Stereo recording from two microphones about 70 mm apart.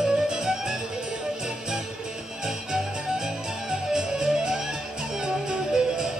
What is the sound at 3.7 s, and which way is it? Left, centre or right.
Music, centre.